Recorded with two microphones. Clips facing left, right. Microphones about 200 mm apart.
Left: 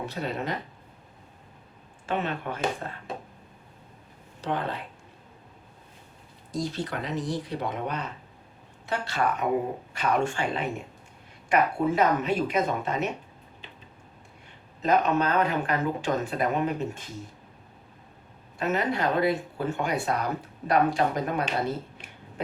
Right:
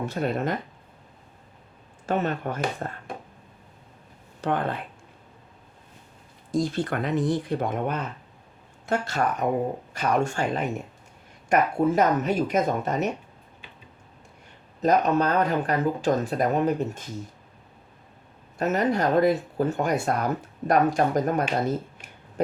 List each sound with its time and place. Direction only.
0.0 s speech: 50° right (ahead or behind)
2.0 s speech: 40° right (ahead or behind)
4.4 s speech: 55° right (ahead or behind)
6.5 s speech: 55° right (ahead or behind)
14.8 s speech: 40° right (ahead or behind)
18.6 s speech: 40° right (ahead or behind)